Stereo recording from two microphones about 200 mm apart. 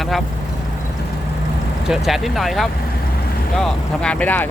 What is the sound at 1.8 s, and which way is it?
Speech, centre (ahead or behind).